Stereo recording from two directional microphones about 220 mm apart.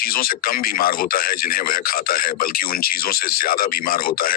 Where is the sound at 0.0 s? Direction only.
40° left (ahead or behind).